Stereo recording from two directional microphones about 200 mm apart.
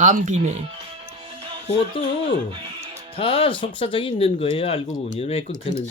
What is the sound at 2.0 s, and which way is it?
Speech, 25° left (ahead or behind).